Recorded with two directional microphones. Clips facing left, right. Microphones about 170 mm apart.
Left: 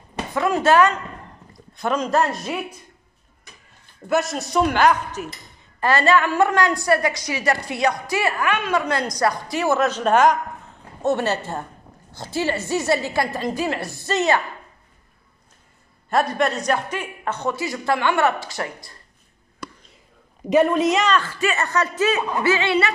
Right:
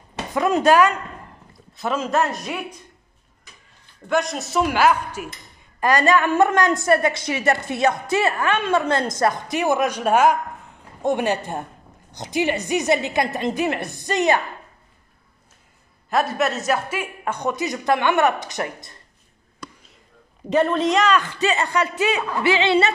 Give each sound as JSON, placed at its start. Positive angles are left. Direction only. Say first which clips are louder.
{"t": 0.3, "sound": "a woman's voice", "louder": "right 1 dB", "side_deg": -20}
{"t": 4.1, "sound": "a man's voice", "louder": "left 1 dB", "side_deg": 0}
{"t": 16.1, "sound": "a woman's voice", "louder": "left 1 dB", "side_deg": 0}
{"t": 20.4, "sound": "a woman's voice", "louder": "left 2 dB", "side_deg": 10}
{"t": 21.1, "sound": "a woman's voice", "louder": "right 1 dB", "side_deg": -15}